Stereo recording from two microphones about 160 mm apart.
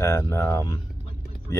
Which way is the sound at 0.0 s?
15° left (ahead or behind).